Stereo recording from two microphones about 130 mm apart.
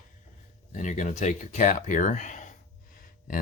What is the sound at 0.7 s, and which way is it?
Speech, 70° left (ahead or behind).